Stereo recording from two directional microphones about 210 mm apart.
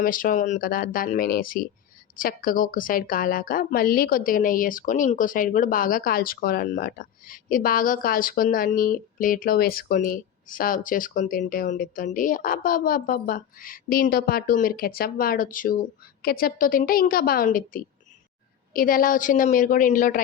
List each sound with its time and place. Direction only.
0.0 s a woman's voice: 40° left (ahead or behind)